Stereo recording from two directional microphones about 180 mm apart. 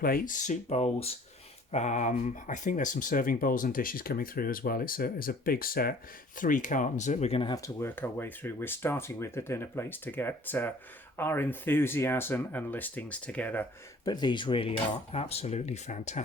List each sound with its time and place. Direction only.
0.0 s speech: 50° left (ahead or behind); by 7.5 s 35° left (ahead or behind)
7.5 s speech: 15° left (ahead or behind)
14.0 s cutlery: 25° left (ahead or behind); by 16.2 s 40° left (ahead or behind)